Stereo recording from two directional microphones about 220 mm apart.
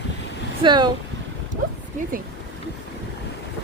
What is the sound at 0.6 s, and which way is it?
Speech, 20° right (ahead or behind).